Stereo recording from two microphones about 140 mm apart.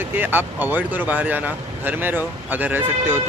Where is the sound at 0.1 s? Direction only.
15° right (ahead or behind).